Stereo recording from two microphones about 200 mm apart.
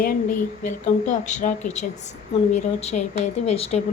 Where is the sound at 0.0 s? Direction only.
45° left (ahead or behind).